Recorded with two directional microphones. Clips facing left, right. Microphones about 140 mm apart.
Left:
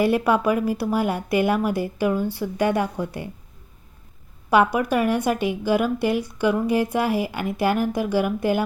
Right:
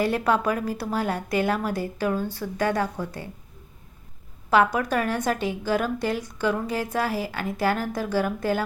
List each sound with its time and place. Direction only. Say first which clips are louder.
0.0 s a woman's voice: left 3 dB; 10° left (ahead or behind)
4.4 s a woman's voice: left 2 dB; 15° left (ahead or behind)